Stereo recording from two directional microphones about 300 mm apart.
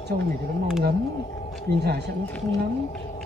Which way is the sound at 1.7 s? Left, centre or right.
Right.